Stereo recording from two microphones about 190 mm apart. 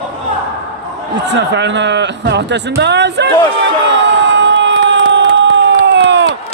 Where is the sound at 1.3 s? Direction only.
65° right (ahead or behind).